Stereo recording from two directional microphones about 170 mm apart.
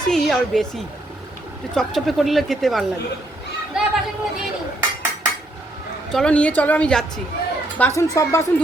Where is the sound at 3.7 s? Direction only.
5° right (ahead or behind).